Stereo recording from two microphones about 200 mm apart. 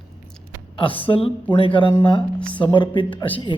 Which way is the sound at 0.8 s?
25° left (ahead or behind).